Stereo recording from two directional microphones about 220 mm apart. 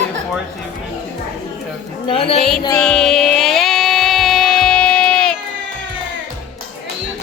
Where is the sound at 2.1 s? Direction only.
25° left (ahead or behind).